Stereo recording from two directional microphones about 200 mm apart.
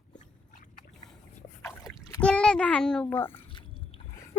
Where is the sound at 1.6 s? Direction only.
5° left (ahead or behind).